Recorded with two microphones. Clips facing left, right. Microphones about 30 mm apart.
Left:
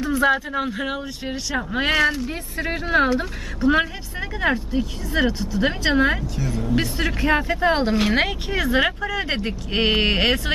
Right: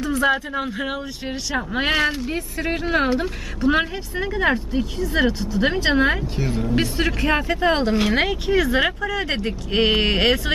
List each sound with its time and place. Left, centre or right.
0.0 s speech: centre
6.3 s speech: right
6.8 s speech: centre